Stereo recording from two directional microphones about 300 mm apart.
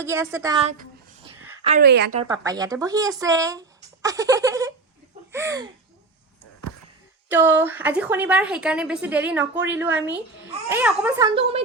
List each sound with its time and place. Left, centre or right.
0.0 s a woman's voice: centre; by 2.1 s right
2.2 s speech: centre
7.3 s a woman's voice: centre